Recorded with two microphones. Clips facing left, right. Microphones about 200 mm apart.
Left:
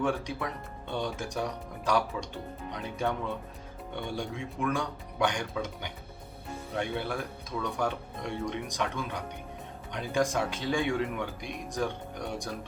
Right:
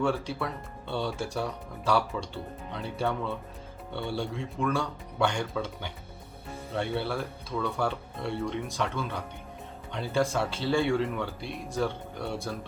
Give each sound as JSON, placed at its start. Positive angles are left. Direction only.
{"t": 0.0, "sound": "speech", "side_deg": 15}